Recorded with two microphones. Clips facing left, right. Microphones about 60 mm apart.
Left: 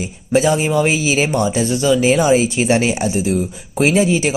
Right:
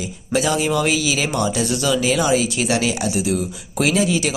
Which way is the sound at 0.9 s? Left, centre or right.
Left.